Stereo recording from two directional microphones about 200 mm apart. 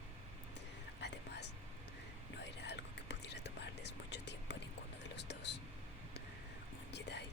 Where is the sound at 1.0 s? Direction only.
60° left (ahead or behind).